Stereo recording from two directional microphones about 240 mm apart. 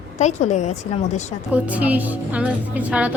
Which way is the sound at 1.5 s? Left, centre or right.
Centre.